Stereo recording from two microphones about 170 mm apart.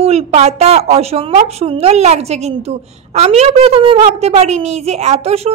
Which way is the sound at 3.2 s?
35° right (ahead or behind).